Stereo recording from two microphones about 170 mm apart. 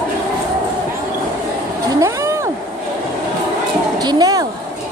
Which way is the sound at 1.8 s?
20° right (ahead or behind).